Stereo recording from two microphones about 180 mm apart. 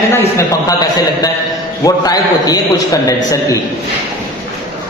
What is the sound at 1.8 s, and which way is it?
A man's voice, 20° left (ahead or behind).